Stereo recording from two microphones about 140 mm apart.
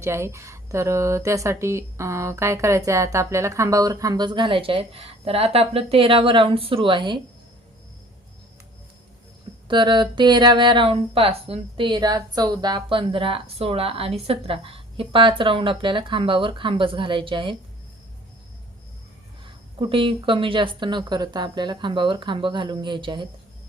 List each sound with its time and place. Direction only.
0.0 s speech: 20° right (ahead or behind); by 7.2 s 35° right (ahead or behind)
9.6 s speech: 35° right (ahead or behind)
19.8 s speech: 40° right (ahead or behind)